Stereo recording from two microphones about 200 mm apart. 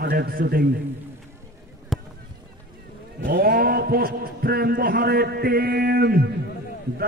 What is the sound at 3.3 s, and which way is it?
A man's voice, 50° right (ahead or behind).